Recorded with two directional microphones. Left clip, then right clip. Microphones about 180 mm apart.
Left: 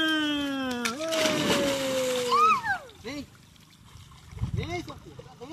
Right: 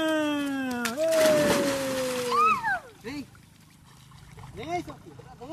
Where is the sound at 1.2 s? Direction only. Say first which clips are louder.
Right 3 dB; 10° left (ahead or behind).